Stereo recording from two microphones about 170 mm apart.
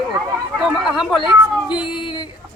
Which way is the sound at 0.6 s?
5° right (ahead or behind).